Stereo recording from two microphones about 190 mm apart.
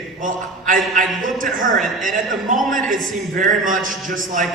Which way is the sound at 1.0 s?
45° right (ahead or behind).